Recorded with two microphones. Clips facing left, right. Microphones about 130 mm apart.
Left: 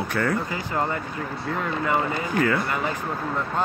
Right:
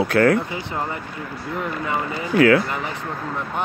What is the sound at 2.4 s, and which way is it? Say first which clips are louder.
Speech: right 8 dB; 80° right.